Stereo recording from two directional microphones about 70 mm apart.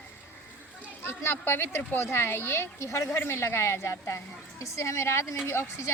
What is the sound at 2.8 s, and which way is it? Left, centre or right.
Speech, left.